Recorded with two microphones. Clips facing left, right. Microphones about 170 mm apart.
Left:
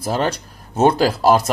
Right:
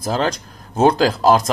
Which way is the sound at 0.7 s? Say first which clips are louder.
Even; 10° left (ahead or behind).